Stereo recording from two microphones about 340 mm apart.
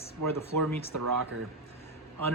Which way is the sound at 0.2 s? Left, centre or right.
Right.